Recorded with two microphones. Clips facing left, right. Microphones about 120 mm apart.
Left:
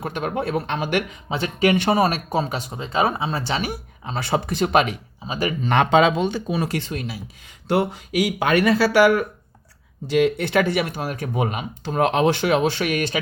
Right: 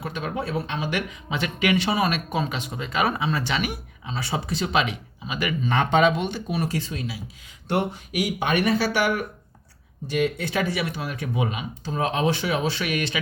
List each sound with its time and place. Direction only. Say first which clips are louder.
0.0 s speech: left 4 dB; 50° left (ahead or behind)
1.3 s speech: left 4 dB; 30° left (ahead or behind)
4.0 s speech: left 6 dB; 55° left (ahead or behind)
5.2 s speech: left 3 dB; 35° left (ahead or behind)
5.6 s speech: left 4 dB; 80° left
6.7 s speech: left 2 dB; 60° left (ahead or behind); by 9.1 s 90° left
10.1 s speech: left 6 dB; 65° left (ahead or behind)
12.8 s speech: left 4 dB; 45° left (ahead or behind)